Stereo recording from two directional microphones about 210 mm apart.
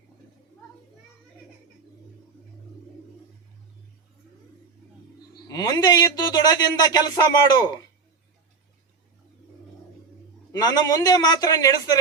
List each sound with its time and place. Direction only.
5.5 s a man's voice: 20° left (ahead or behind)
10.5 s a man's voice: 20° left (ahead or behind)